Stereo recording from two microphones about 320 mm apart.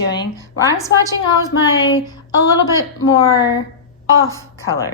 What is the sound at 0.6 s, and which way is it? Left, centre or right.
A woman's voice, centre.